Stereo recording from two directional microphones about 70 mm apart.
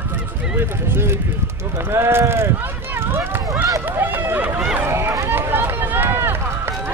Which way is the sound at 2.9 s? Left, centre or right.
Right.